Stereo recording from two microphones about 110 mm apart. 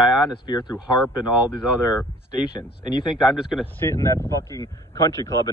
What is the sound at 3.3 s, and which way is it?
Speech, 5° right (ahead or behind).